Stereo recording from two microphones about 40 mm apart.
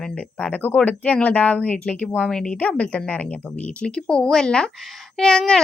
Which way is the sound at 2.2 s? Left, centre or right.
Centre.